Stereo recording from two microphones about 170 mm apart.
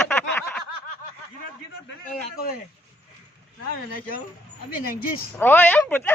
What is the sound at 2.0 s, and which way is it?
Speech, 60° left (ahead or behind).